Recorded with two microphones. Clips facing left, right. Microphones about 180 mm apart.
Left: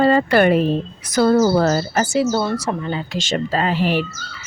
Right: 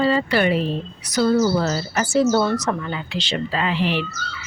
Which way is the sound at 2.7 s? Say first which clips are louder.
Left 2 dB; 30° left (ahead or behind).